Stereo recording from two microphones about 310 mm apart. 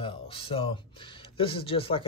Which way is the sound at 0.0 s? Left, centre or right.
Centre.